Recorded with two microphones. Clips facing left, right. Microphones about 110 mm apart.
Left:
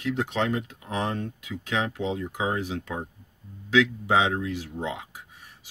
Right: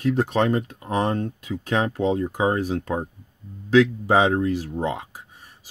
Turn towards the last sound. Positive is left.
turn(degrees=-40)  # may be behind; listen again after turning